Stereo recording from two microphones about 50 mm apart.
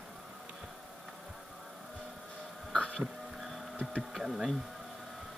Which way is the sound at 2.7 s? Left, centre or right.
Left.